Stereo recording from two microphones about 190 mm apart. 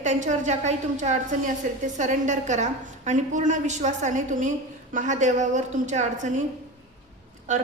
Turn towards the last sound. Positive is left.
turn(degrees=-40)  # may be behind; listen again after turning